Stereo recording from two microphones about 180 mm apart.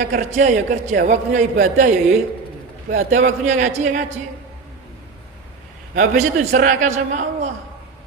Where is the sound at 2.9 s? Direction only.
45° right (ahead or behind).